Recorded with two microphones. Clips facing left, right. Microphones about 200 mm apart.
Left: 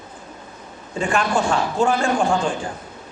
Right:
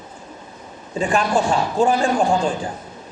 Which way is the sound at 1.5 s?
35° right (ahead or behind).